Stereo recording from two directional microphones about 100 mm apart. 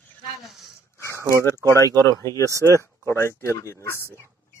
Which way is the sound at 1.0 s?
30° right (ahead or behind).